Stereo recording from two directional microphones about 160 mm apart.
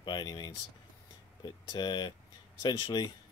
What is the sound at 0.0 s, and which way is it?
Speech, 25° left (ahead or behind).